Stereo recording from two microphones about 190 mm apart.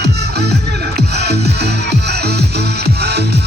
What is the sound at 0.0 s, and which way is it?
Music, 60° right (ahead or behind).